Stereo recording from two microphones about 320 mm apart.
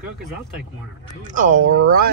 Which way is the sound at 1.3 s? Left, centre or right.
Right.